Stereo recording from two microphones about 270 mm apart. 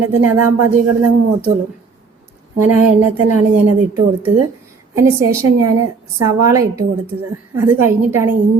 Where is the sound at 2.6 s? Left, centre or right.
Right.